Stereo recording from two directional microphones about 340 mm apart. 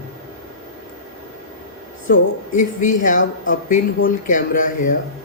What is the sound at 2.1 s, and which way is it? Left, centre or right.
Speech, left.